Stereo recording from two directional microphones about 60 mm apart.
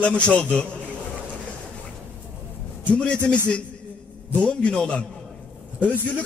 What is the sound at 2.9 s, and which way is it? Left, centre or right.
Speech, centre.